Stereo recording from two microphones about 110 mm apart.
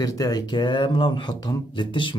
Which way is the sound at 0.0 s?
35° left (ahead or behind).